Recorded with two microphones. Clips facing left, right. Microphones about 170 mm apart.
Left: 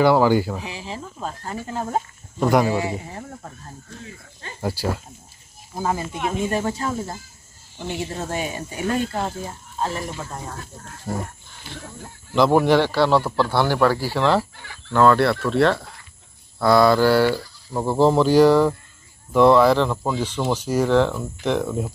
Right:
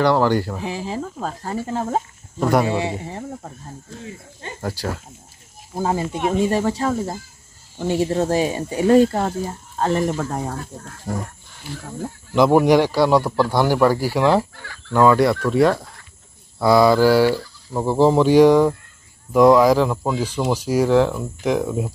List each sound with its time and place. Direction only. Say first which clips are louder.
0.0 s speech: left 1 dB; 5° left (ahead or behind)
0.9 s speech: right 5 dB; 35° right (ahead or behind)
2.4 s speech: even; centre (ahead or behind)
2.7 s speech: right 1 dB; 25° right (ahead or behind)
4.6 s speech: left 2 dB; 10° left (ahead or behind)
5.8 s speech: right 3 dB; 25° right (ahead or behind)
9.8 s speech: right 7 dB; 65° right (ahead or behind)
11.1 s speech: right 1 dB; 15° right (ahead or behind)
12.4 s speech: right 2 dB; 10° right (ahead or behind)